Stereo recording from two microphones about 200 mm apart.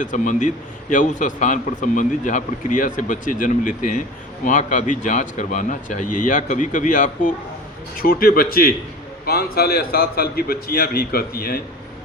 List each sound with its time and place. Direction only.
0.0 s a man's voice: 40° left (ahead or behind)